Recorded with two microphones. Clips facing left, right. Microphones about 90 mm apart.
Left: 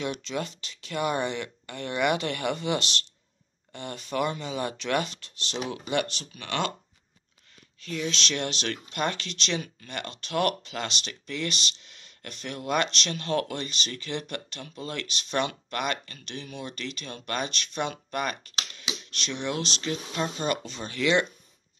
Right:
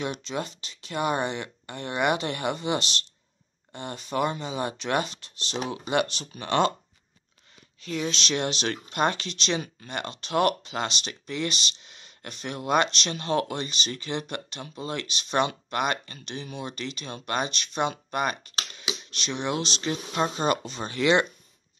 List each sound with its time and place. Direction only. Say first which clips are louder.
0.0 s speech: even; 25° right (ahead or behind)
8.1 s speech: right 2 dB; 20° right (ahead or behind)
18.8 s a sound: right 2 dB; 20° right (ahead or behind)
19.3 s speech: right 2 dB; 20° right (ahead or behind)
19.8 s speech: right 3 dB; 35° right (ahead or behind)